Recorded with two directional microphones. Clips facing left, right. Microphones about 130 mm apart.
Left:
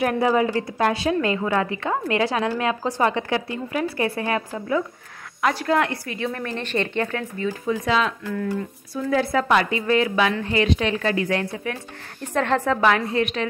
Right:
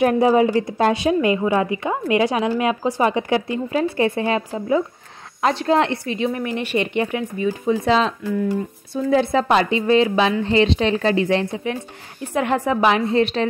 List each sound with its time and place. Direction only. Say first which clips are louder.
0.0 s a woman's voice: right 5 dB; 20° right (ahead or behind)
8.3 s a woman's voice: right 4 dB; 15° right (ahead or behind); by 13.5 s 30° right (ahead or behind)